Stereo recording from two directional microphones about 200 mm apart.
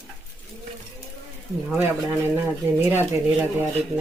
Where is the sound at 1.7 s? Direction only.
10° right (ahead or behind).